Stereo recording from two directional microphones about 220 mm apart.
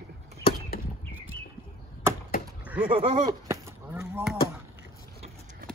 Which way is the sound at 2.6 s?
5° right (ahead or behind).